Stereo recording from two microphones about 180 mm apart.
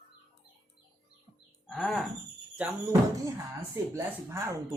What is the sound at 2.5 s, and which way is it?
Speech, 10° right (ahead or behind).